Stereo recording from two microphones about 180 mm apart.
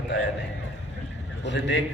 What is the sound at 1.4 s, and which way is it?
Speech, 80° left.